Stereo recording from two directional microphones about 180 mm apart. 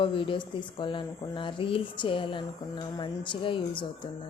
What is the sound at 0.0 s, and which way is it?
Speech, 30° left (ahead or behind).